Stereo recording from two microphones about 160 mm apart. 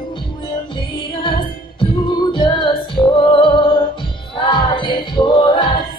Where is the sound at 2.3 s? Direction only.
30° left (ahead or behind).